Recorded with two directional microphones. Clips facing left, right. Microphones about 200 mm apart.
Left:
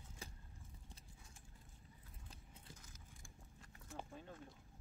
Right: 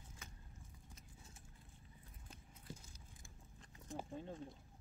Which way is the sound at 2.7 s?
30° right (ahead or behind).